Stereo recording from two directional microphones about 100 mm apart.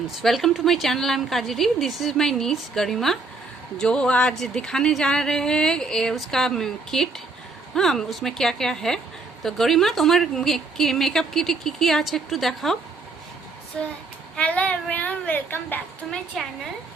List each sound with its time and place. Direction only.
0.2 s a woman's voice: centre (ahead or behind)
13.7 s speech: 5° left (ahead or behind)
16.0 s a woman's voice: 5° left (ahead or behind)